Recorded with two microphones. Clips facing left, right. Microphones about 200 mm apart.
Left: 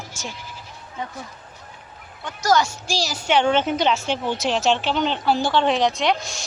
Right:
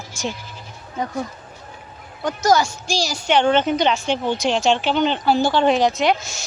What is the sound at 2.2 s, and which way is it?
Speech, 40° right (ahead or behind).